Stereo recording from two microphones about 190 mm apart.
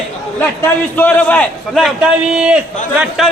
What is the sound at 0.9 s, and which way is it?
A man's voice, 10° left (ahead or behind).